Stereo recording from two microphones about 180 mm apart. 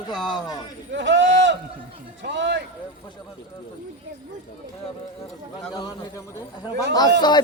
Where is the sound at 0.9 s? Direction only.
80° right.